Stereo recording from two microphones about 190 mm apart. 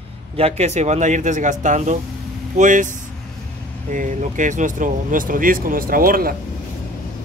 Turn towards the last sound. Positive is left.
turn(degrees=-50)  # may be behind; listen again after turning